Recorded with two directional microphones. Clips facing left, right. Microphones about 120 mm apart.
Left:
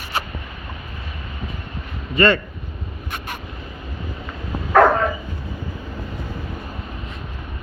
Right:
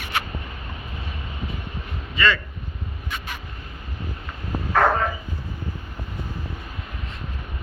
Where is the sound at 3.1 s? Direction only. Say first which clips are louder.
Left 2 dB; 55° left (ahead or behind).